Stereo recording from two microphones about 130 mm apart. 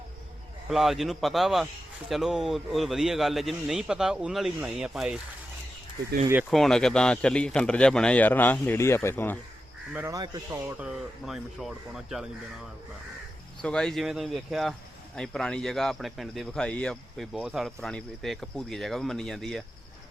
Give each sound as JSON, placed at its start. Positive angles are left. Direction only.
{"t": 0.7, "sound": "speech", "side_deg": 0}
{"t": 6.5, "sound": "speech", "side_deg": 5}
{"t": 10.1, "sound": "speech", "side_deg": -25}
{"t": 10.8, "sound": "speech", "side_deg": -5}
{"t": 13.6, "sound": "speech", "side_deg": 5}
{"t": 17.3, "sound": "speech", "side_deg": -5}